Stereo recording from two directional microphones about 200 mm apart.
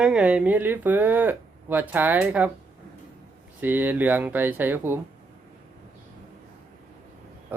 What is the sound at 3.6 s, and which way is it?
Speech, 10° right (ahead or behind).